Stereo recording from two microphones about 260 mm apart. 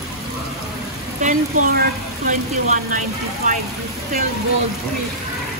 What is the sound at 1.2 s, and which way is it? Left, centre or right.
Speech, right.